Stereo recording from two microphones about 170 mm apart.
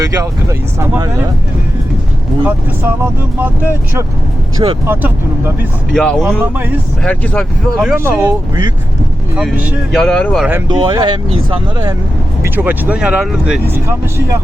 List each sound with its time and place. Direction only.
0.0 s speech: 20° right (ahead or behind)
2.4 s speech: 10° right (ahead or behind)
4.6 s speech: 25° right (ahead or behind)
5.9 s speech: 5° left (ahead or behind)
6.4 s speech: 10° right (ahead or behind)
7.0 s speech: 5° left (ahead or behind)
7.9 s speech: 10° right (ahead or behind)
9.3 s speech: 10° right (ahead or behind)
9.9 s speech: 5° left (ahead or behind)
10.7 s speech: 25° right (ahead or behind)
12.5 s speech: 10° right (ahead or behind)